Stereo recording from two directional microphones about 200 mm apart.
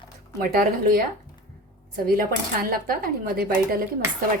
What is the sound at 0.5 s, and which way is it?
Speech, 45° right (ahead or behind).